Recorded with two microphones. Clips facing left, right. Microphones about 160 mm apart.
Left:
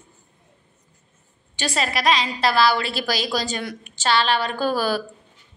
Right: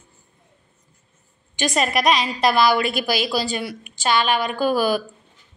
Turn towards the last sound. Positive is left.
turn(degrees=-15)  # may be behind; listen again after turning